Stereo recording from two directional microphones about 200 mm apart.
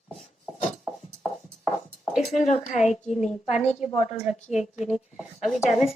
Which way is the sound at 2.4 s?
35° left (ahead or behind).